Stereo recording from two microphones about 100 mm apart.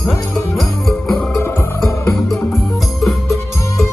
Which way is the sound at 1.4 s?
25° left (ahead or behind).